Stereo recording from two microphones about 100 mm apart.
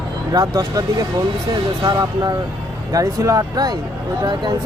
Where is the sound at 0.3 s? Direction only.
40° right (ahead or behind).